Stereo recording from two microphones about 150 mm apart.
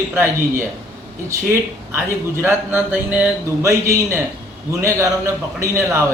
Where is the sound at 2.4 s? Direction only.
15° right (ahead or behind).